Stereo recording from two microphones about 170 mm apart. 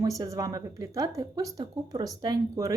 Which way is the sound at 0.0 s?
20° right (ahead or behind).